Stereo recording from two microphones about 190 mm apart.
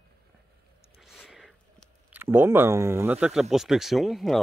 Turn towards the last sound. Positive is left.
turn(degrees=0)  # may be behind; listen again after turning